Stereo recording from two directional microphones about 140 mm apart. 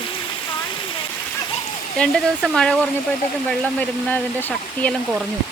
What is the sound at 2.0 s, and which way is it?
Speech, 5° left (ahead or behind).